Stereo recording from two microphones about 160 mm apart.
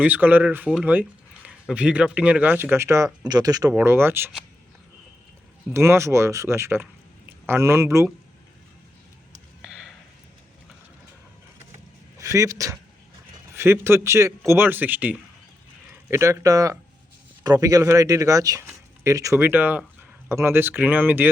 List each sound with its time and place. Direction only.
0.0 s speech: 10° right (ahead or behind)
5.7 s speech: 15° right (ahead or behind)
9.6 s a sound: 5° right (ahead or behind)
12.2 s speech: 20° right (ahead or behind)